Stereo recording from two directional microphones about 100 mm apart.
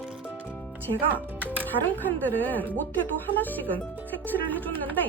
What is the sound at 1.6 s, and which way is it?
Speech, 15° left (ahead or behind).